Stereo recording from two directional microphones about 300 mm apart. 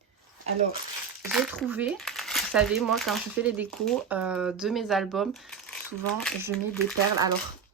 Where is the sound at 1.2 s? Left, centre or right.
Centre.